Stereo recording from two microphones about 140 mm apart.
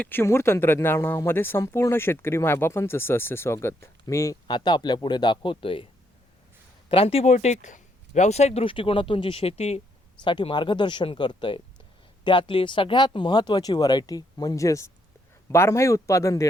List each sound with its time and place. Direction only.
0.0 s speech: 15° left (ahead or behind); by 7.3 s 45° left (ahead or behind)
7.3 s speech: 60° left (ahead or behind)
10.2 s speech: 35° left (ahead or behind)